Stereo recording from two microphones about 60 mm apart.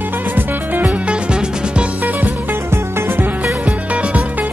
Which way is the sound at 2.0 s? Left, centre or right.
Right.